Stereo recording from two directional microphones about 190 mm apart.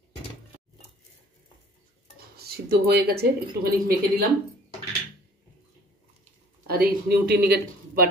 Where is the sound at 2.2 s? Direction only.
55° right (ahead or behind).